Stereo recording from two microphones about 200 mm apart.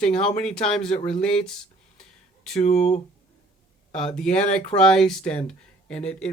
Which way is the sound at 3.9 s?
5° left (ahead or behind).